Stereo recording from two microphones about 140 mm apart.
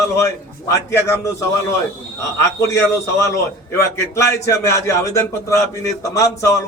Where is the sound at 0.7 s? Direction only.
20° left (ahead or behind).